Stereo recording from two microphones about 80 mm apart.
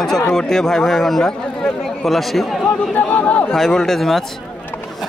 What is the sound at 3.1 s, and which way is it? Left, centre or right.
Speech, centre.